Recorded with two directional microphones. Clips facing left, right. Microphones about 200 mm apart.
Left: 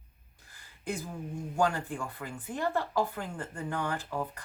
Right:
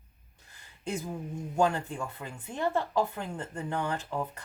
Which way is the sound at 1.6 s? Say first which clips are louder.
Right 2 dB; 20° right (ahead or behind).